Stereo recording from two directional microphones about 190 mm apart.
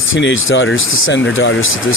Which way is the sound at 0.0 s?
80° left.